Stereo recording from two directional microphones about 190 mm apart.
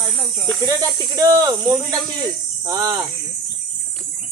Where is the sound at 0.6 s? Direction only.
20° right (ahead or behind).